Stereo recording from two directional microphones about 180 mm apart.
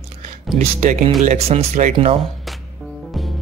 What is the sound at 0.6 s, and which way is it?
Speech, 40° right (ahead or behind).